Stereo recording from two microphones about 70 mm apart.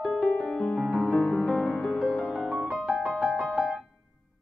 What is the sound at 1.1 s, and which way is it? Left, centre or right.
Music, left.